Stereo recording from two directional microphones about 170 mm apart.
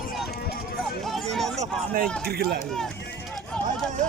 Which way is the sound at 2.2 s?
65° right (ahead or behind).